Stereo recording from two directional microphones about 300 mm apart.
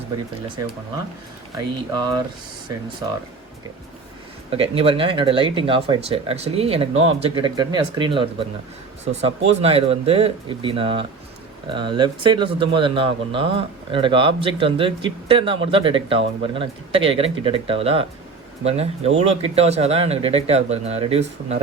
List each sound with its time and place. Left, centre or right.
1.5 s a man's voice: centre
4.5 s a man's voice: centre